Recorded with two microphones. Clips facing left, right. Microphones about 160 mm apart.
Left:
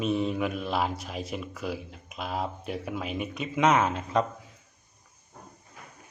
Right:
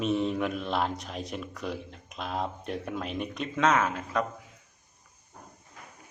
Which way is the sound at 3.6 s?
20° left (ahead or behind).